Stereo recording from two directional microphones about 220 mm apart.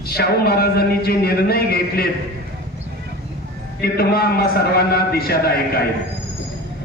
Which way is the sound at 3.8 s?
45° left (ahead or behind).